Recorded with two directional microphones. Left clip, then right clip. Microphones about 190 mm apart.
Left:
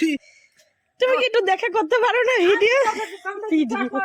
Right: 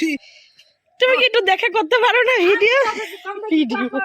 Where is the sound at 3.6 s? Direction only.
45° right (ahead or behind).